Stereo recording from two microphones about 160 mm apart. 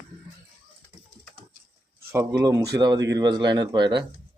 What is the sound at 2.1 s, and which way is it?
Speech, 20° right (ahead or behind).